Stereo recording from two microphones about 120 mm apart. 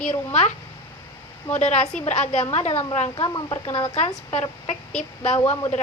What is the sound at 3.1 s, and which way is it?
Speech, 40° left (ahead or behind).